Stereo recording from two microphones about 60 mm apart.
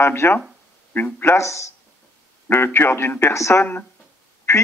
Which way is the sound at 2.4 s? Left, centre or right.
Left.